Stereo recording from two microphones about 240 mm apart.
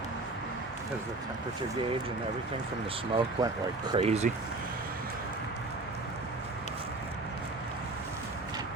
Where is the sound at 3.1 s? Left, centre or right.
Centre.